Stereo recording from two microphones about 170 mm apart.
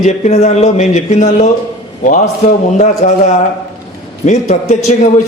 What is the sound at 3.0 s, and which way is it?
Speech, 50° left (ahead or behind).